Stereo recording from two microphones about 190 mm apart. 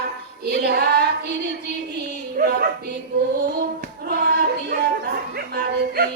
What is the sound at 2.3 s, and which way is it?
Dog, 50° right (ahead or behind).